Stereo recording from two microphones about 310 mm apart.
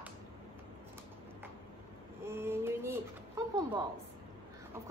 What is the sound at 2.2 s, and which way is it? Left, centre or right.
Speech, centre.